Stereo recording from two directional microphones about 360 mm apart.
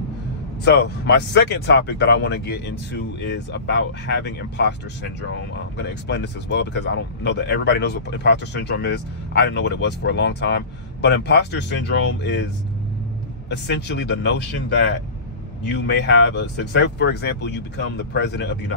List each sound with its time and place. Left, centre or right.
0.7 s speech: left
5.8 s speech: left
13.5 s speech: left
15.6 s speech: left